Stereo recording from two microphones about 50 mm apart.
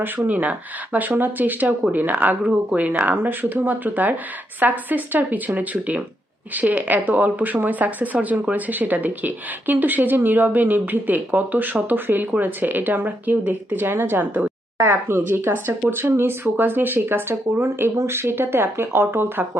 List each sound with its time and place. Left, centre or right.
0.0 s speech: right
2.4 s speech: right
14.8 s speech: right